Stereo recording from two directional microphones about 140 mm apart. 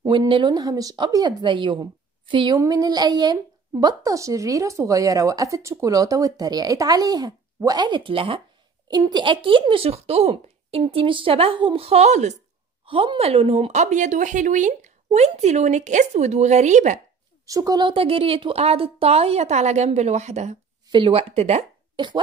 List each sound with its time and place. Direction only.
0.1 s speech: 35° right (ahead or behind)
8.8 s speech: 30° right (ahead or behind); by 12.4 s 55° right (ahead or behind)
12.8 s speech: 40° right (ahead or behind); by 17.0 s 60° right (ahead or behind)
17.5 s speech: 25° right (ahead or behind); by 20.5 s 55° right (ahead or behind)
20.9 s speech: 40° right (ahead or behind)
21.9 s speech: 35° right (ahead or behind)